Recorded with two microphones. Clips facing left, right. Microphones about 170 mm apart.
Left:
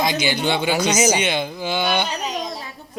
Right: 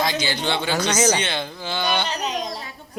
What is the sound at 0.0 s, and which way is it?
Speech, 15° left (ahead or behind).